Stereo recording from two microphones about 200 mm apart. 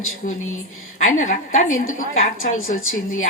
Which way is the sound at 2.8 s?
90° left.